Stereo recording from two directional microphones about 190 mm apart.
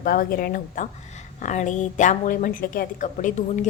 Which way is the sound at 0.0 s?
50° left (ahead or behind).